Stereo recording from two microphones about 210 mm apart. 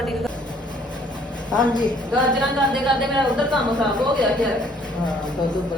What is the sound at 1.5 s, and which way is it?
Speech, 20° left (ahead or behind).